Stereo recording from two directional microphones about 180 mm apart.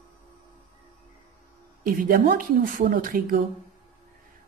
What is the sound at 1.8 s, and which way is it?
Speech, 55° right (ahead or behind).